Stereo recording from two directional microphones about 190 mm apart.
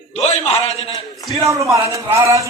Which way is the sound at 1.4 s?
15° right (ahead or behind).